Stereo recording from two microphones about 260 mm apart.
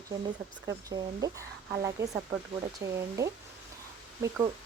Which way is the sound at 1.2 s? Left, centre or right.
Centre.